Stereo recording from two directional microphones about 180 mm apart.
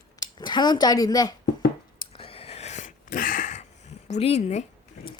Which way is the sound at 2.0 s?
30° left (ahead or behind).